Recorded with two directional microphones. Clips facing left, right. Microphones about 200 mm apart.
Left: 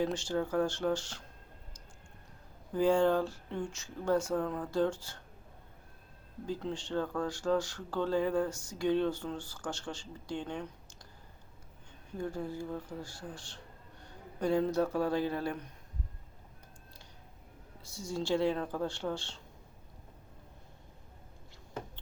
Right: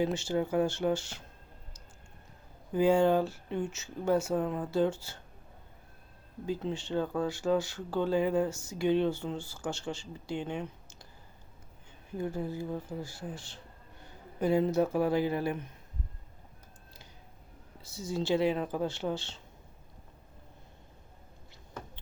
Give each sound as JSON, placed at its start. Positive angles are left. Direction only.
{"t": 0.0, "sound": "speech", "side_deg": -5}
{"t": 2.7, "sound": "speech", "side_deg": -10}
{"t": 6.6, "sound": "speech", "side_deg": -5}
{"t": 12.3, "sound": "speech", "side_deg": -5}
{"t": 17.8, "sound": "speech", "side_deg": -5}
{"t": 18.5, "sound": "speech", "side_deg": -15}
{"t": 19.1, "sound": "speech", "side_deg": -5}